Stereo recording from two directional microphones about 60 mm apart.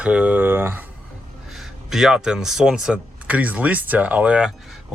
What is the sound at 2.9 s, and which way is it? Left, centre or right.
Speech, right.